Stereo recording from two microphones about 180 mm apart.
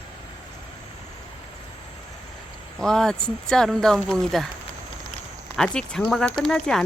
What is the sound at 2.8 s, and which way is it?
Speech, 5° left (ahead or behind).